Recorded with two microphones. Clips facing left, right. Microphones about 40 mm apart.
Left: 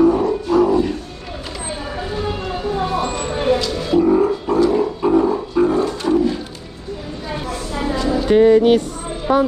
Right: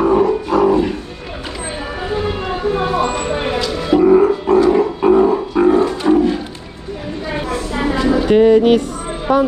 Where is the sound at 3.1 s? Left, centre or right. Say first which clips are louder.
Left 1 dB; right.